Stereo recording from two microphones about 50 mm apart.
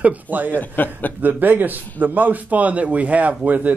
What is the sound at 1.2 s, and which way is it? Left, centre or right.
Speech, right.